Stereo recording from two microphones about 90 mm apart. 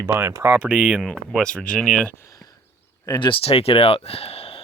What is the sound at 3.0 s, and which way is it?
Speech, 50° left (ahead or behind).